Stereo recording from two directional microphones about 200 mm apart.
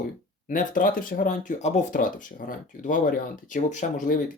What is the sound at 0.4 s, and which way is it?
Speech, 40° left (ahead or behind).